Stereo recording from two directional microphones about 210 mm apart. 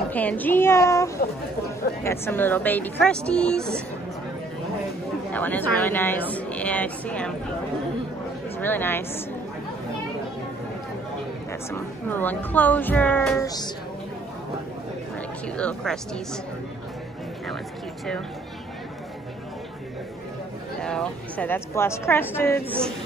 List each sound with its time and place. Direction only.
0.1 s a woman's voice: 5° left (ahead or behind)
5.3 s a woman's voice: 10° left (ahead or behind)
8.5 s a woman's voice: 10° left (ahead or behind)
11.7 s a woman's voice: 10° left (ahead or behind)
13.4 s a woman's voice: 20° left (ahead or behind)
15.4 s speech: 5° left (ahead or behind)
20.8 s a woman's voice: 5° left (ahead or behind)